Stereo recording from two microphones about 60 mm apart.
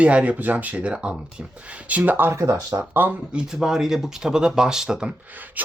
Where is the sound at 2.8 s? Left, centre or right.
Right.